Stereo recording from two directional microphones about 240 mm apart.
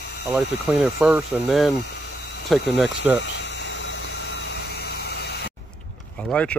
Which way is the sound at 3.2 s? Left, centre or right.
Left.